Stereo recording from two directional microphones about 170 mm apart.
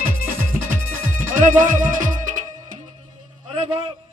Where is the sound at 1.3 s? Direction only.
50° right (ahead or behind).